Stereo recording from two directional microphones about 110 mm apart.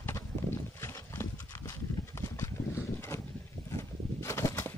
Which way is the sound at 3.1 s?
30° left (ahead or behind).